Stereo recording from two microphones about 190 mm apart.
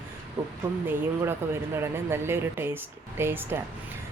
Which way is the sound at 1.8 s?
15° right (ahead or behind).